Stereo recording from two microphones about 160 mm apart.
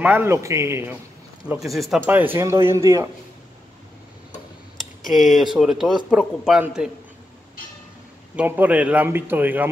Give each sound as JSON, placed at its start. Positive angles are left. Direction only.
{"t": 0.0, "sound": "speech", "side_deg": -15}
{"t": 1.5, "sound": "a man's voice", "side_deg": 0}
{"t": 2.0, "sound": "speech", "side_deg": -10}
{"t": 5.1, "sound": "a man's voice", "side_deg": 0}
{"t": 8.4, "sound": "speech", "side_deg": -10}